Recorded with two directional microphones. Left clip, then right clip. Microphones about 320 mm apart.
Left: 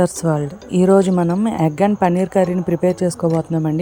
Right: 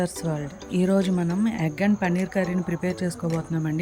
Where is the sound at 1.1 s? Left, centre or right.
Left.